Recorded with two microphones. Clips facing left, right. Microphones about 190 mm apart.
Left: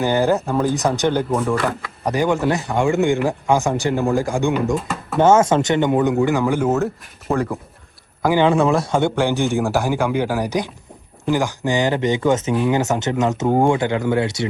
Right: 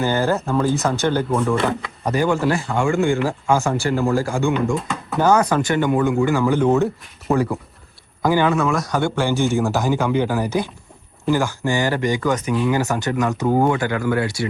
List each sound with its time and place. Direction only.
0.0 s speech: 15° left (ahead or behind)
1.4 s speech: centre (ahead or behind)
2.0 s speech: 15° left (ahead or behind)
4.5 s speech: centre (ahead or behind)
5.2 s speech: 25° left (ahead or behind); by 6.8 s 5° left (ahead or behind)
8.2 s speech: 15° left (ahead or behind)
8.4 s speech: 30° left (ahead or behind)